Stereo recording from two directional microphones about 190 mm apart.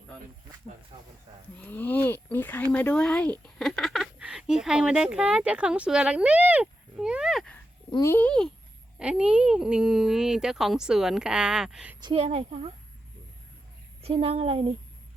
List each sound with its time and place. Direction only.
1.5 s speech: 10° left (ahead or behind)
11.9 s speech: 25° right (ahead or behind)
14.0 s speech: 30° right (ahead or behind)